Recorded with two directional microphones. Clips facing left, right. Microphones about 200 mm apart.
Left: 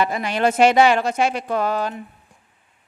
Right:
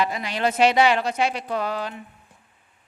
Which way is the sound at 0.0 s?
50° left (ahead or behind).